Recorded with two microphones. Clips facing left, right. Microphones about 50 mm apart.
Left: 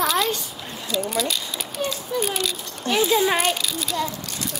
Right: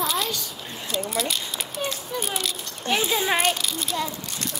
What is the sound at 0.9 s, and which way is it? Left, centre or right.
Speech, right.